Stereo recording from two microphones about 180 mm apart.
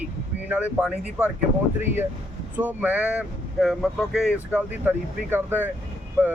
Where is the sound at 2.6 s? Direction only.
10° right (ahead or behind).